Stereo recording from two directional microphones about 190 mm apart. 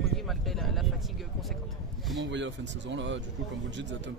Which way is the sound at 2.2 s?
70° right (ahead or behind).